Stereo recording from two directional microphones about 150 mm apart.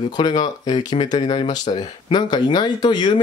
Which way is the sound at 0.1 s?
30° left (ahead or behind).